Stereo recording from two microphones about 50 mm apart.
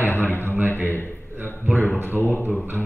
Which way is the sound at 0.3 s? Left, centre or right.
Left.